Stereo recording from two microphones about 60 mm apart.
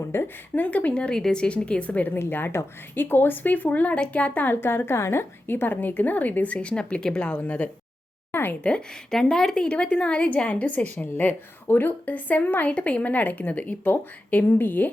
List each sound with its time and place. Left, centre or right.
0.1 s speech: left
0.5 s a woman's voice: left
2.1 s a woman's voice: left
8.3 s a sound: left
9.0 s a woman's voice: centre; by 14.8 s left